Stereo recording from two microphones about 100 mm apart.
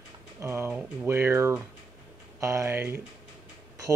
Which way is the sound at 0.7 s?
25° right (ahead or behind).